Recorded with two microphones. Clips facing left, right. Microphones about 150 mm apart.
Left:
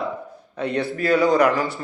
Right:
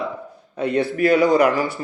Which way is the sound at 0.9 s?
20° right (ahead or behind).